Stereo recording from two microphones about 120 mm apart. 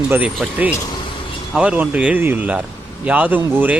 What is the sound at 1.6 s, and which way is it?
Speech, 10° right (ahead or behind).